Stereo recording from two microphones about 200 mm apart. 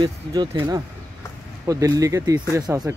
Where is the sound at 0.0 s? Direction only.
20° right (ahead or behind).